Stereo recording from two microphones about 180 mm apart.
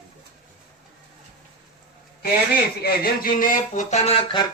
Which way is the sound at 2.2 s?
60° left (ahead or behind).